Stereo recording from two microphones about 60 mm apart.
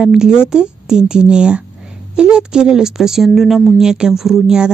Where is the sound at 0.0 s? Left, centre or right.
Centre.